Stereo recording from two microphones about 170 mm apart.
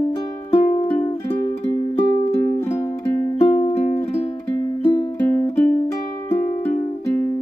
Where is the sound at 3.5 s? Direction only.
35° left (ahead or behind).